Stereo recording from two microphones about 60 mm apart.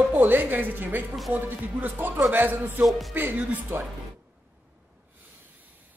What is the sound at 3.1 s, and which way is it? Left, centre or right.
Speech, right.